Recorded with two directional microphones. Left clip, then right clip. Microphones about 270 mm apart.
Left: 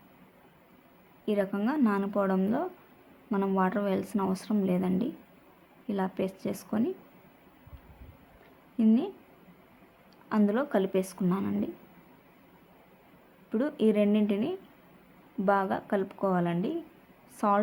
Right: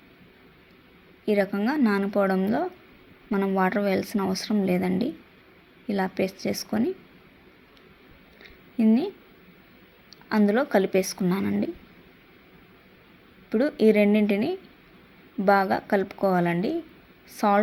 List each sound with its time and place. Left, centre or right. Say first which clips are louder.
1.2 s speech: right 5 dB; centre
8.8 s speech: right 4 dB; centre
10.2 s speech: right 5 dB; centre
13.5 s speech: right 7 dB; centre